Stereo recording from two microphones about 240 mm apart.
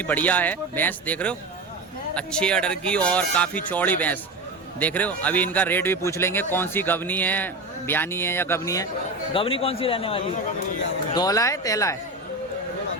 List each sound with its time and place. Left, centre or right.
0.0 s a man's voice: centre